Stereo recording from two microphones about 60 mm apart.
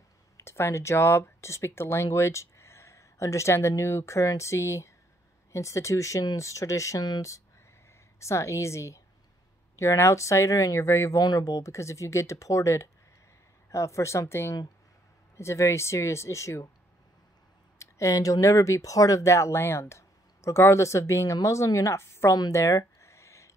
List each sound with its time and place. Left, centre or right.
0.4 s speech: left
2.1 s a sound: left
3.5 s speech: left
11.1 s speech: left
17.7 s speech: left
21.9 s a woman's voice: left
22.9 s a sound: left